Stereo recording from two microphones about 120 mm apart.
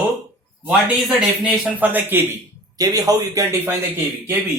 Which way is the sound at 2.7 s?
30° right (ahead or behind).